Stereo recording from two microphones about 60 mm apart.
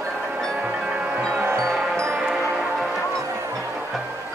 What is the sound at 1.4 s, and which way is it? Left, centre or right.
Music, right.